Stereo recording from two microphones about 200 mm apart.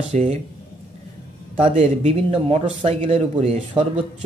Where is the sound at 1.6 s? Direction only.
30° right (ahead or behind).